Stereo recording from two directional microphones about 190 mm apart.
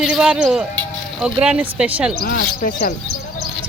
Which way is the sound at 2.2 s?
50° left (ahead or behind).